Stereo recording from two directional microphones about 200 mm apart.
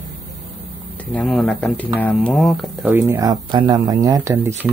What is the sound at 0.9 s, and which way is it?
Speech, 5° left (ahead or behind).